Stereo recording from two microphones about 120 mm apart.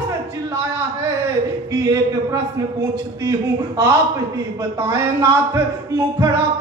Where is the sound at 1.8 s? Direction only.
30° right (ahead or behind).